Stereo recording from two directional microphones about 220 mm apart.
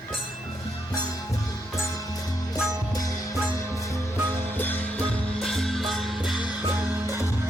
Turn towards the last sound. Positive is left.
turn(degrees=0)  # may be behind; listen again after turning